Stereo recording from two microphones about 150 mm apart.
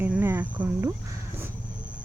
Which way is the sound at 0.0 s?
15° right (ahead or behind).